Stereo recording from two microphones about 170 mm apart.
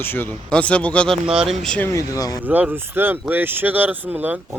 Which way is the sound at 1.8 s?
20° left (ahead or behind).